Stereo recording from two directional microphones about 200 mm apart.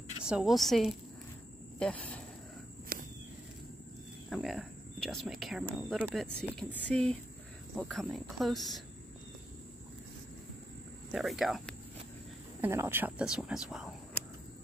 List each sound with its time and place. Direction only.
0.2 s speech: 5° right (ahead or behind)
2.9 s walk: 50° right (ahead or behind)
4.3 s speech: centre (ahead or behind)
11.1 s speech: centre (ahead or behind)
12.6 s speech: 10° right (ahead or behind)